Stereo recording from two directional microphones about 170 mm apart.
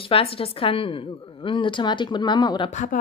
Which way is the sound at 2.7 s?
50° left (ahead or behind).